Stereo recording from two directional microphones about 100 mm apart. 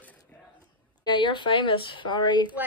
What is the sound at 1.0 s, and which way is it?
A woman's voice, 50° left (ahead or behind).